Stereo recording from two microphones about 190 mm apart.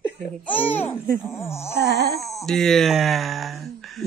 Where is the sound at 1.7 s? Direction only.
60° right (ahead or behind).